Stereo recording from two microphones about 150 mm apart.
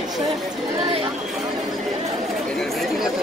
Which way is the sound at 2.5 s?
Centre (ahead or behind).